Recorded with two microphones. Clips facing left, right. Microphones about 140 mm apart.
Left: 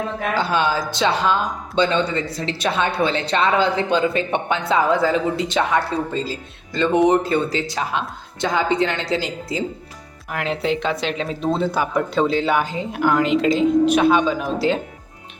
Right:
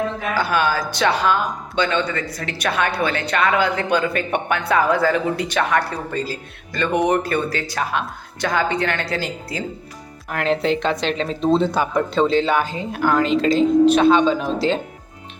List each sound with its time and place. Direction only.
0.3 s speech: 25° left (ahead or behind)
10.3 s speech: 5° left (ahead or behind)